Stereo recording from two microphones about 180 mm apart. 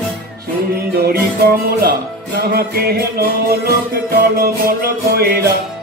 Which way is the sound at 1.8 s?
60° right (ahead or behind).